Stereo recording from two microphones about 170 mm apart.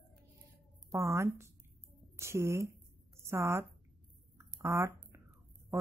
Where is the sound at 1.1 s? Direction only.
15° right (ahead or behind).